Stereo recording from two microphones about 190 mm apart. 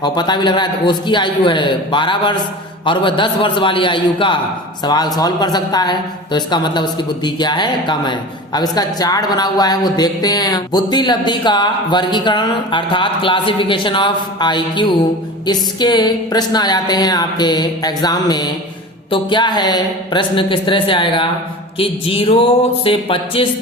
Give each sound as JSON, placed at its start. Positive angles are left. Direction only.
{"t": 0.0, "sound": "speech", "side_deg": 25}